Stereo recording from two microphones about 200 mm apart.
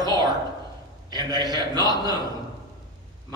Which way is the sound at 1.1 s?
20° right (ahead or behind).